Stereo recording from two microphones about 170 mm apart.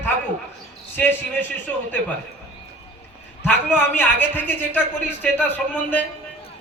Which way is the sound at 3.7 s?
10° left (ahead or behind).